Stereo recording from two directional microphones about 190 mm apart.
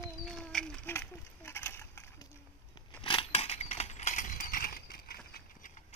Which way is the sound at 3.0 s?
30° left (ahead or behind).